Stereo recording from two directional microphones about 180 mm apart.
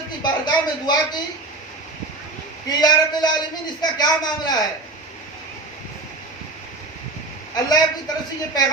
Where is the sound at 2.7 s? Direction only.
20° left (ahead or behind).